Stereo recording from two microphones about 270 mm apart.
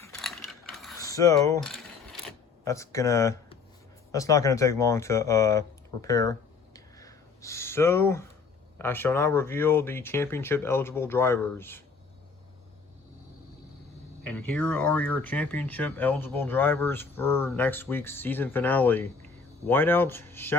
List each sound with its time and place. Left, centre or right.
0.0 s mechanisms: centre
0.9 s speech: centre
1.7 s mechanisms: centre
2.6 s speech: centre
6.7 s a sound: centre
8.8 s speech: centre
14.3 s speech: centre